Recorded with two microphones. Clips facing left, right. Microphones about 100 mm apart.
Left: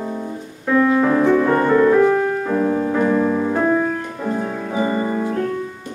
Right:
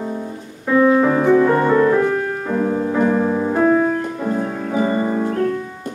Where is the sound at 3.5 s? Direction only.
5° right (ahead or behind).